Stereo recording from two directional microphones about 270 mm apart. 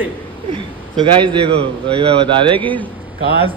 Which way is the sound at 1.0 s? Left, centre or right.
Centre.